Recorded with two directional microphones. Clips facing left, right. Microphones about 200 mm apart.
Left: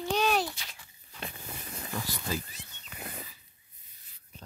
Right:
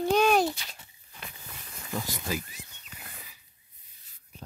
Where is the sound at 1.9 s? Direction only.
15° right (ahead or behind).